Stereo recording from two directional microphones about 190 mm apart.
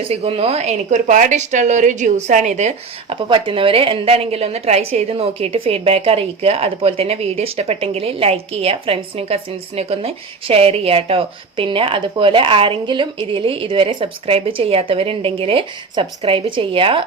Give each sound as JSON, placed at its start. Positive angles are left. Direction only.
{"t": 0.1, "sound": "a woman's voice", "side_deg": -30}